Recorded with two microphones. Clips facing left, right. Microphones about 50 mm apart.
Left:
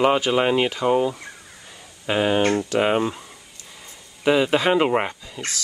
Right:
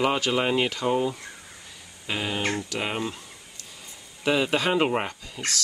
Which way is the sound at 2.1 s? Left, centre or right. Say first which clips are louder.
Left 9 dB; left.